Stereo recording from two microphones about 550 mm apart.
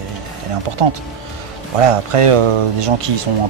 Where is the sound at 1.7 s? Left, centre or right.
Right.